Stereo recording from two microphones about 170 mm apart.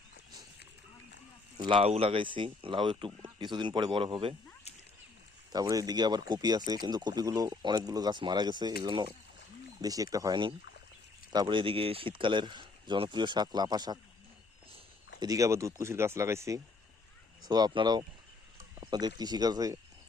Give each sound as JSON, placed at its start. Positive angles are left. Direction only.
{"t": 1.5, "sound": "speech", "side_deg": -30}
{"t": 5.5, "sound": "speech", "side_deg": -20}
{"t": 15.2, "sound": "speech", "side_deg": -20}